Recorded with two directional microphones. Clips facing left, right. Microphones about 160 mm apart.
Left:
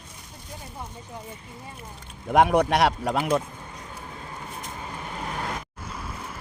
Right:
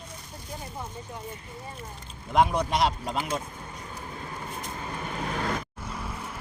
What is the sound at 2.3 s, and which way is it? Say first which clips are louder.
Speech: left 4 dB; 70° left (ahead or behind).